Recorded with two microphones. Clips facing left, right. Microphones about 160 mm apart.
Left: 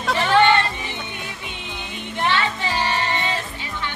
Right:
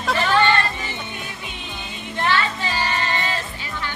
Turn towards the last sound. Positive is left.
turn(degrees=20)  # may be behind; listen again after turning